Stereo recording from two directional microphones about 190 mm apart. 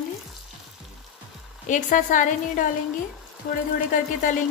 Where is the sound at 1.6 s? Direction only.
40° left (ahead or behind).